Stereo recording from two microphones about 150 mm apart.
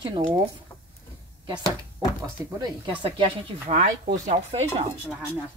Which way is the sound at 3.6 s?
50° right (ahead or behind).